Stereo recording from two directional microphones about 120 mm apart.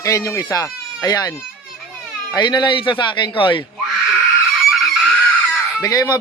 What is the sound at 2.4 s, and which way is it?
Speech, 40° left (ahead or behind).